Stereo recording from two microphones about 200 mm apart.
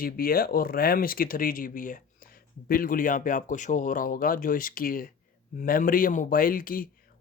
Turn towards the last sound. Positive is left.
turn(degrees=45)  # may be behind; listen again after turning